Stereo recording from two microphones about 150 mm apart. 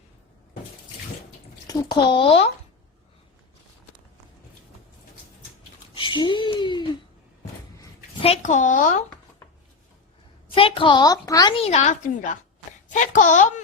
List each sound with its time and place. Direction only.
1.6 s a child's voice: 30° left (ahead or behind)
5.9 s a sound: 35° left (ahead or behind)
8.2 s a woman's voice: 50° left (ahead or behind)
10.5 s a child's voice: 35° left (ahead or behind)
11.5 s a woman's voice: 45° left (ahead or behind)